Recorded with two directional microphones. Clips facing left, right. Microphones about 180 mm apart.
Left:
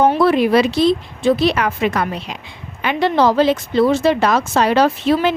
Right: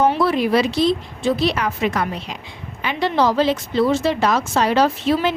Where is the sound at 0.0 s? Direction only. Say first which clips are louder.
Left 4 dB; 60° left (ahead or behind).